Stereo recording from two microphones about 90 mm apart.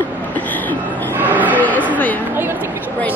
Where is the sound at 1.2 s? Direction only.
20° right (ahead or behind).